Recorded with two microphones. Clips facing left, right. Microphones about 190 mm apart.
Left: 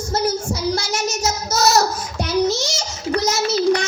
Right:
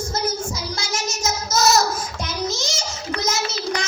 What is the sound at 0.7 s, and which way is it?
Child singing, 65° left (ahead or behind).